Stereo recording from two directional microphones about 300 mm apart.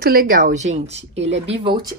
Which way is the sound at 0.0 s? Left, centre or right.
Right.